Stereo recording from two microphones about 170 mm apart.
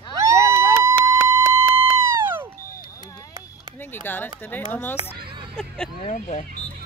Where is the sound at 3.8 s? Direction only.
10° left (ahead or behind).